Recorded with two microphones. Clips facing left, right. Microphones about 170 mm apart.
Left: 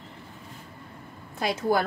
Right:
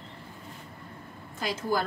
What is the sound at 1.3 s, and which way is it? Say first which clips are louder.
Speech: left 5 dB; 65° left (ahead or behind).